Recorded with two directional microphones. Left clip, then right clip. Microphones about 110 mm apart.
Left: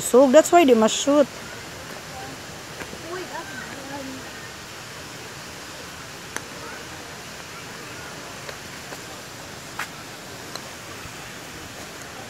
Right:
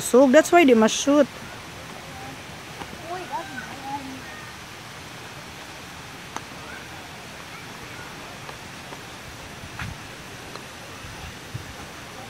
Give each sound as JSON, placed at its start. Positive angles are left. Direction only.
{"t": 0.2, "sound": "speech", "side_deg": -30}